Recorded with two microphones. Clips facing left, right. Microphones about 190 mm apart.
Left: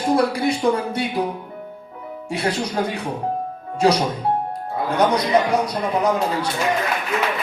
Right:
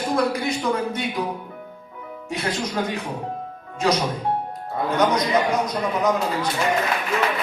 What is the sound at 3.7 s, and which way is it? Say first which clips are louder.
Speech: left 4 dB; 30° left (ahead or behind).